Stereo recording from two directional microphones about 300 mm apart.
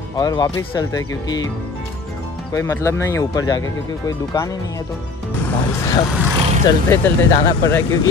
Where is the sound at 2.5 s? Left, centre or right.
Centre.